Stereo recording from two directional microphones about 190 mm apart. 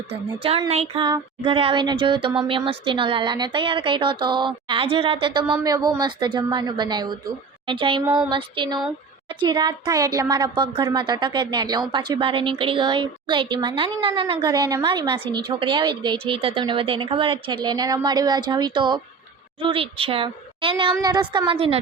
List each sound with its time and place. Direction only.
0.1 s speech: 30° right (ahead or behind)